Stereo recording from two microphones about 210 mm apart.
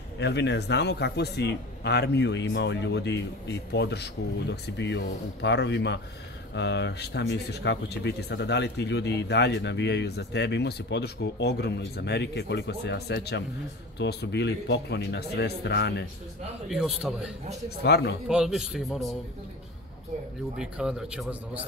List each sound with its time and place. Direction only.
0.2 s speech: 55° left (ahead or behind)
16.6 s a man's voice: centre (ahead or behind)
17.8 s speech: 50° left (ahead or behind)
18.3 s a man's voice: 5° right (ahead or behind)
20.5 s a man's voice: 5° right (ahead or behind)